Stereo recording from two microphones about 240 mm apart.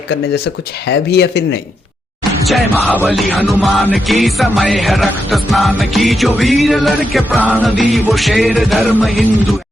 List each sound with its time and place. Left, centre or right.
0.9 s speech: left
2.5 s music: centre